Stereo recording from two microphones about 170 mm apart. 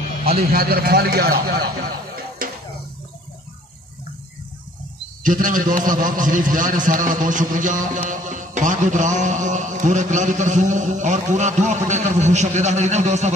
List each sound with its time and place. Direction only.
0.5 s a man's voice: 60° right (ahead or behind)
5.2 s a man's voice: 50° right (ahead or behind)